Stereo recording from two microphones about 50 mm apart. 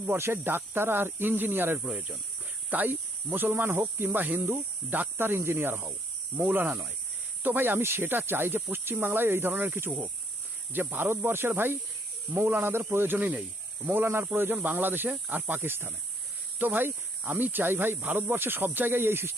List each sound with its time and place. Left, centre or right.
0.2 s speech: right
1.8 s speech: right
2.6 s speech: right
5.1 s speech: right
14.0 s speech: right
14.3 s speech: right